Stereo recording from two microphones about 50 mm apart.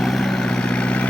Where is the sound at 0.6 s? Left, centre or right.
Left.